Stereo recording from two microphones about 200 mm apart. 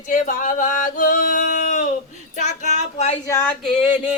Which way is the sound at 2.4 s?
35° left (ahead or behind).